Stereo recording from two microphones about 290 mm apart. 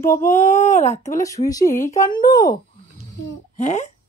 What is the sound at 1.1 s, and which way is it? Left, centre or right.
Speech, centre.